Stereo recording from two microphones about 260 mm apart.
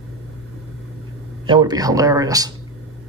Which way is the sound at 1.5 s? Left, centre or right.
Centre.